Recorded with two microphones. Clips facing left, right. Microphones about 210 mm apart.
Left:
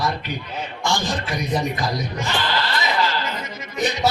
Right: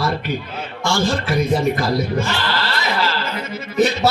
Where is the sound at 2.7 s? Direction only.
15° left (ahead or behind).